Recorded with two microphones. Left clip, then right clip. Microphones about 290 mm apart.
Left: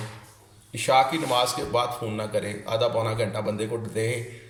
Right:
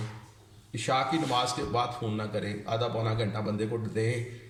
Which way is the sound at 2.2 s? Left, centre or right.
Centre.